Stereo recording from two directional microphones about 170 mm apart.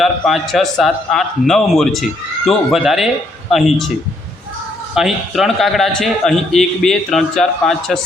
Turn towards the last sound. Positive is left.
turn(degrees=0)  # may be behind; listen again after turning